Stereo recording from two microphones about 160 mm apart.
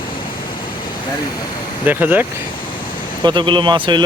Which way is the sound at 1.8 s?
10° right (ahead or behind).